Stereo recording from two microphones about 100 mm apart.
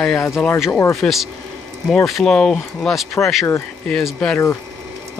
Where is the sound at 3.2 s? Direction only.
20° left (ahead or behind).